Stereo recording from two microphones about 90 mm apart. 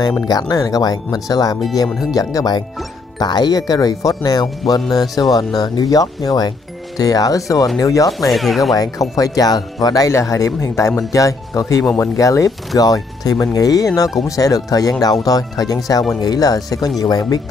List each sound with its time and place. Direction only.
0.3 s speech: 45° left (ahead or behind)
8.1 s speech: centre (ahead or behind)
9.1 s speech: 40° left (ahead or behind)